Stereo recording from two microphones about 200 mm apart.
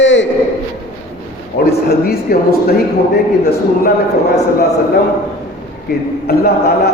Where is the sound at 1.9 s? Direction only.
50° left (ahead or behind).